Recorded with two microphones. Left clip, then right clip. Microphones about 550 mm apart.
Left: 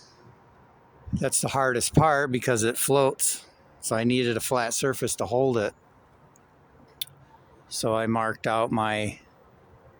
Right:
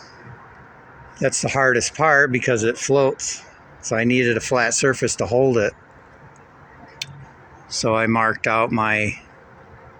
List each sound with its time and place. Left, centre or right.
1.1 s speech: left
7.8 s speech: left